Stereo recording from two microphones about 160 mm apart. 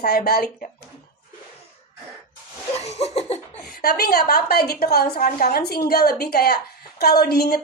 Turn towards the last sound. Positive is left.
turn(degrees=75)  # may be behind; listen again after turning